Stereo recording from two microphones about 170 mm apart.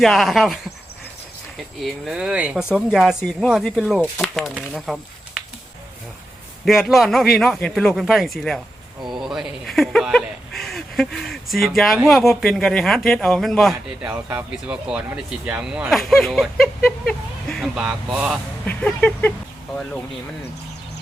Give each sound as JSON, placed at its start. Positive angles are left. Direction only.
{"t": 0.0, "sound": "speech", "side_deg": 0}
{"t": 1.8, "sound": "speech", "side_deg": -5}
{"t": 6.7, "sound": "speech", "side_deg": 0}
{"t": 9.0, "sound": "a sound", "side_deg": -25}
{"t": 9.2, "sound": "speech", "side_deg": 0}
{"t": 18.6, "sound": "speech", "side_deg": 10}